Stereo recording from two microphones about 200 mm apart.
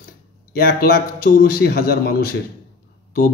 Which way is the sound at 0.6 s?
50° left (ahead or behind).